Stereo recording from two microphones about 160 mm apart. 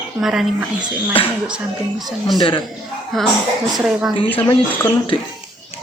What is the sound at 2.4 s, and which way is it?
Speech, 30° left (ahead or behind).